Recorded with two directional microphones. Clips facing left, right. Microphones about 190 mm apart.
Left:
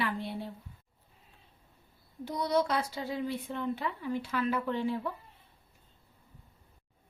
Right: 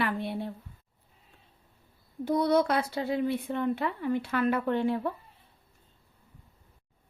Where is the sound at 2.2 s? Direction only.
55° right (ahead or behind).